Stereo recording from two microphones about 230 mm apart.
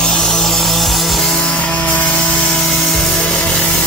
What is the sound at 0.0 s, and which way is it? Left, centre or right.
Music, centre.